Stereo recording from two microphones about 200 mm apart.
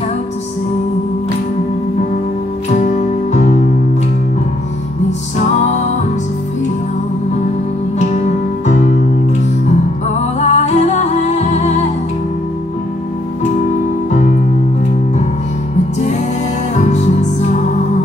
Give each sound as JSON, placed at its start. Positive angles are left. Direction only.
{"t": 2.8, "sound": "music", "side_deg": 35}
{"t": 8.6, "sound": "music", "side_deg": 35}
{"t": 10.4, "sound": "music", "side_deg": 35}
{"t": 16.7, "sound": "music", "side_deg": 35}